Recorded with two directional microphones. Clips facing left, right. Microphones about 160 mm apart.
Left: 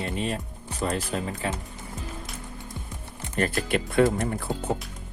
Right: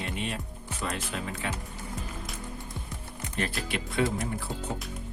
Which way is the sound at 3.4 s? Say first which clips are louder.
Left 7 dB; 50° left (ahead or behind).